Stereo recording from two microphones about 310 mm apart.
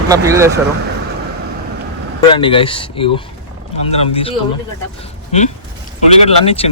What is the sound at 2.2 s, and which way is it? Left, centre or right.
Speech, centre.